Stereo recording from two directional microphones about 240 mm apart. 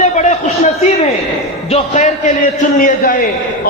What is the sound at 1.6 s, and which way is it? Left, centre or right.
A man's voice, left.